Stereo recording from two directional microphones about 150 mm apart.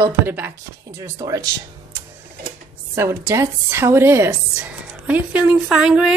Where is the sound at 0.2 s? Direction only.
15° right (ahead or behind).